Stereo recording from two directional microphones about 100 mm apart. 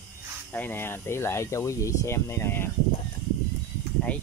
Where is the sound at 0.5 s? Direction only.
20° left (ahead or behind).